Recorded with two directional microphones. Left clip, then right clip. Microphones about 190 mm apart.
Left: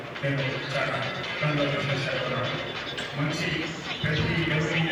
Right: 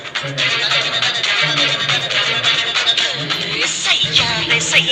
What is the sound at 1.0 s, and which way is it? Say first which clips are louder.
Music: right 14 dB; 50° right (ahead or behind).